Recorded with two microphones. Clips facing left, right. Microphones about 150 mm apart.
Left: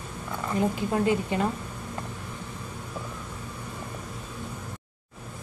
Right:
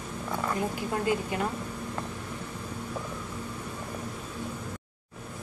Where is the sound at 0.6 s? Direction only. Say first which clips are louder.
Left 5 dB; 25° left (ahead or behind).